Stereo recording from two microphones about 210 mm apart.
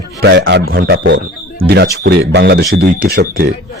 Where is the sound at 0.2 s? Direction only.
55° right (ahead or behind).